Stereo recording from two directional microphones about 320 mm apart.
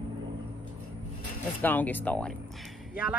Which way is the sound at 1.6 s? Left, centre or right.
Centre.